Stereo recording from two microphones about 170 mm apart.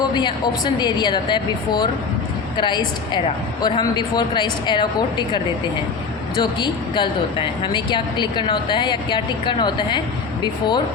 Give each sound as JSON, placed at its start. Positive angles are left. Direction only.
{"t": 0.1, "sound": "a woman's voice", "side_deg": 25}
{"t": 6.4, "sound": "a woman's voice", "side_deg": 25}